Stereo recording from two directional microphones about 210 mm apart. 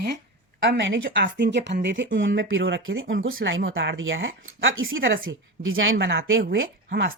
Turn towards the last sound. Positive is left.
turn(degrees=-55)  # may be behind; listen again after turning